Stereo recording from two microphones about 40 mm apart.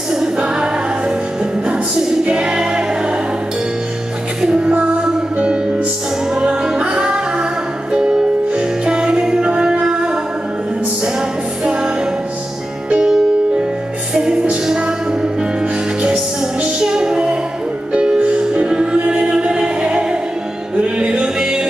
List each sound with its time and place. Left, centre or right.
0.4 s music: right
4.4 s music: right
11.1 s music: right
12.9 s music: right
16.8 s music: centre
19.0 s chant: right
19.3 s music: right